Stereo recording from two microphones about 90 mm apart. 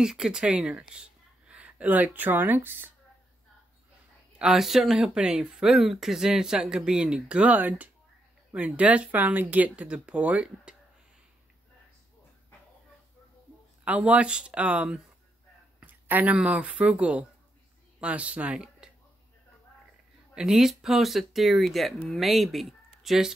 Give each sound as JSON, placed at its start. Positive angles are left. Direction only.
{"t": 0.0, "sound": "speech", "side_deg": -5}
{"t": 4.4, "sound": "speech", "side_deg": -5}
{"t": 13.8, "sound": "speech", "side_deg": -15}
{"t": 15.8, "sound": "a sound", "side_deg": -20}
{"t": 16.3, "sound": "speech", "side_deg": -15}
{"t": 20.3, "sound": "speech", "side_deg": -5}